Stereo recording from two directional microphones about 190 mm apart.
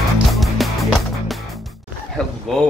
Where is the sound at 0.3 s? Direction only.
Centre (ahead or behind).